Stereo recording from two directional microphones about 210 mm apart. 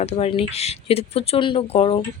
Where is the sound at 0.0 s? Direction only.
30° left (ahead or behind).